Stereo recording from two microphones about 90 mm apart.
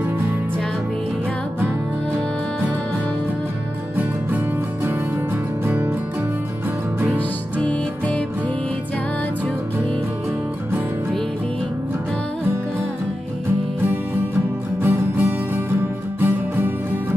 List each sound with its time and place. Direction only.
5.7 s music: 20° right (ahead or behind)
7.6 s music: 10° left (ahead or behind)
14.8 s music: 25° right (ahead or behind)